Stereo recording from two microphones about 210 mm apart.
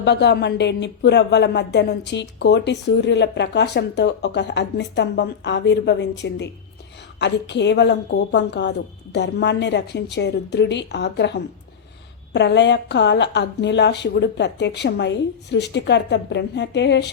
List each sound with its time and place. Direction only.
0.0 s speech: 55° left (ahead or behind)